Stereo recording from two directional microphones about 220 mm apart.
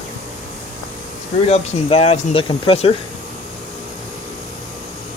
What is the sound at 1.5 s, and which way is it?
Speech, 30° left (ahead or behind).